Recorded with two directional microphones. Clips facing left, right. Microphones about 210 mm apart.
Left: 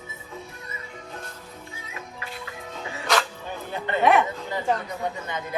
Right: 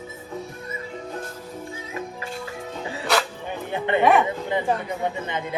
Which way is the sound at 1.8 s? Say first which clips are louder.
Right 5 dB; 35° right (ahead or behind).